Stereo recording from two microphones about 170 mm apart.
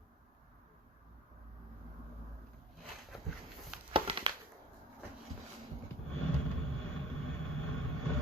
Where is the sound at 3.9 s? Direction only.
30° right (ahead or behind).